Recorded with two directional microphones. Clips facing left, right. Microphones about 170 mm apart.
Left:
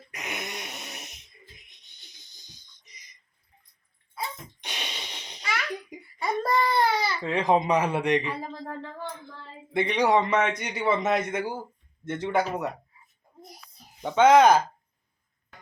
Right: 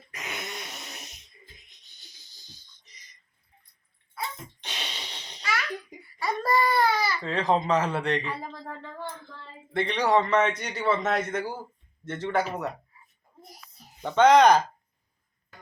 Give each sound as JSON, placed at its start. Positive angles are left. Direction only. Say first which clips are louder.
{"t": 0.1, "sound": "a sound", "louder": "left 1 dB", "side_deg": 20}
{"t": 2.5, "sound": "a sound", "louder": "right 2 dB", "side_deg": 15}
{"t": 4.6, "sound": "babbling", "louder": "left 1 dB", "side_deg": 10}
{"t": 7.2, "sound": "speech", "louder": "left 2 dB", "side_deg": 15}
{"t": 8.2, "sound": "speech", "louder": "left 2 dB", "side_deg": 0}
{"t": 9.7, "sound": "speech", "louder": "left 1 dB", "side_deg": 10}
{"t": 14.0, "sound": "speech", "louder": "even", "side_deg": 10}